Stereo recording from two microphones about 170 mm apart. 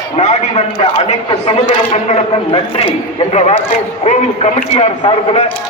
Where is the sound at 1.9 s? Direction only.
40° left (ahead or behind).